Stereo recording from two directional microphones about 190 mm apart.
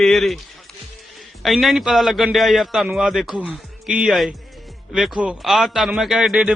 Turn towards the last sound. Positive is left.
turn(degrees=-5)  # may be behind; listen again after turning